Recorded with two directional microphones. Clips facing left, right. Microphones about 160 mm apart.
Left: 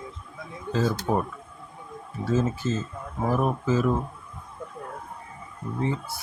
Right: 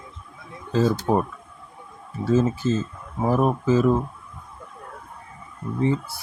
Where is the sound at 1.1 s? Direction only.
30° right (ahead or behind).